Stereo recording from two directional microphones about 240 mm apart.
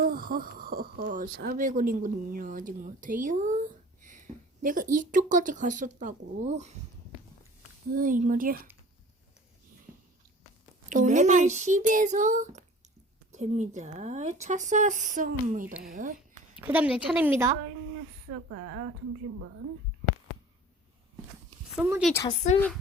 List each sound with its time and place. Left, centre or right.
0.0 s speech: right
7.9 s speech: right
10.8 s speech: right
15.6 s speech: centre
15.9 s speech: right
16.6 s a woman's voice: centre
18.5 s a woman's voice: right
21.8 s speech: centre
22.1 s speech: centre